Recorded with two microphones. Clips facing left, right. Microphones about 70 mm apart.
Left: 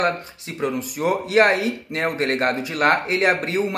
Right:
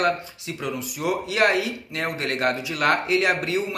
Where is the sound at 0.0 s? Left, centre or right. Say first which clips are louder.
Left 1 dB; left.